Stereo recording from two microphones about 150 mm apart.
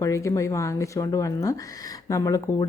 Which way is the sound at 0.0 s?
20° left (ahead or behind).